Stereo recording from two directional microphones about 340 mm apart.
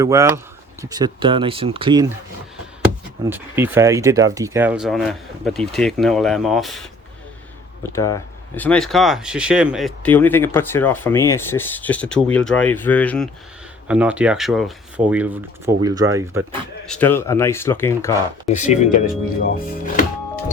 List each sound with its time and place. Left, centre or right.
0.0 s speech: centre
3.2 s speech: centre
7.9 s speech: centre
16.8 s speech: centre
18.4 s speech: centre